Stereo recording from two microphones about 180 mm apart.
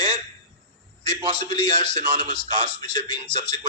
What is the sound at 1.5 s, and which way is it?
Speech, 25° left (ahead or behind).